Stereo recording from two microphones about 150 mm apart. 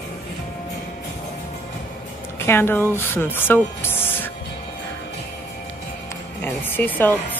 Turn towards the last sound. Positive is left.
turn(degrees=10)  # may be behind; listen again after turning